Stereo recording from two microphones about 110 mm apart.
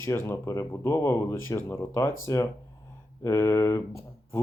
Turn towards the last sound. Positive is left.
turn(degrees=25)  # may be behind; listen again after turning